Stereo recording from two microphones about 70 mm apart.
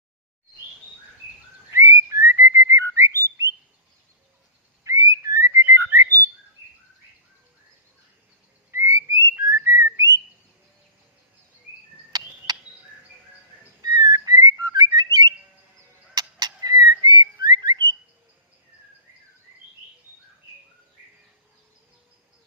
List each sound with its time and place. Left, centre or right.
1.7 s whistling: right
4.8 s whistling: right
8.7 s whistling: right
9.3 s whistling: right
12.5 s bird: right
13.8 s whistling: right